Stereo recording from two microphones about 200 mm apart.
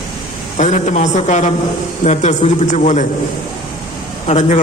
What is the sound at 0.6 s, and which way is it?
A man's voice, 35° left (ahead or behind).